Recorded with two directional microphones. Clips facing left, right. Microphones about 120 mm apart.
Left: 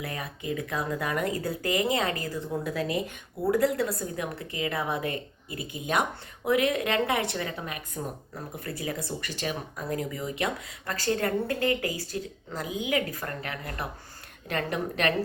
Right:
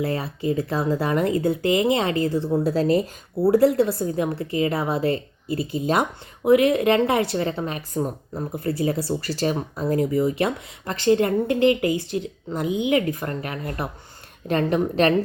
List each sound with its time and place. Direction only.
0.0 s speech: 30° right (ahead or behind)